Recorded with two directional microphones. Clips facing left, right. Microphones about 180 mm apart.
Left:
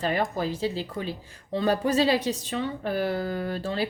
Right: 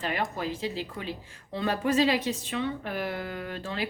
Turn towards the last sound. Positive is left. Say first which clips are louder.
# left 5 dB
turn(degrees=35)  # may be behind; listen again after turning